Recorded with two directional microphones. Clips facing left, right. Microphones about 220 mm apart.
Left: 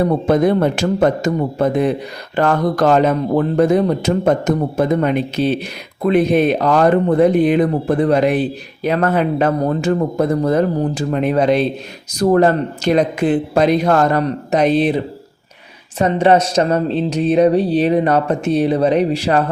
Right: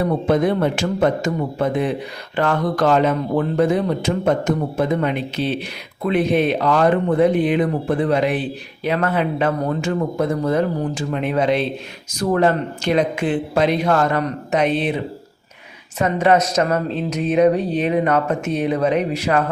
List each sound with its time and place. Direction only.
0.0 s speech: 40° left (ahead or behind)